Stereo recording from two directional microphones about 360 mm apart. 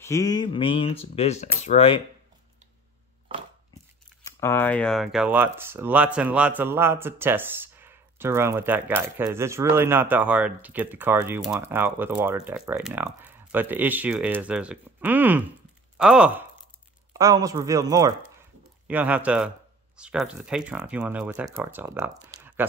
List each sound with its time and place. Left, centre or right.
0.0 s speech: centre
3.3 s a sound: centre
4.2 s speech: centre